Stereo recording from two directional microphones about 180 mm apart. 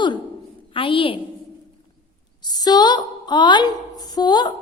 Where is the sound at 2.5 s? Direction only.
20° left (ahead or behind).